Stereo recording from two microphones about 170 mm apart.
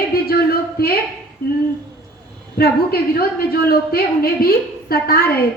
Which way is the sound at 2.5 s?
65° left (ahead or behind).